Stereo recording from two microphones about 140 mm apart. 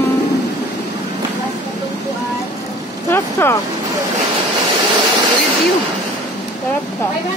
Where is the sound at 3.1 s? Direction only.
15° left (ahead or behind).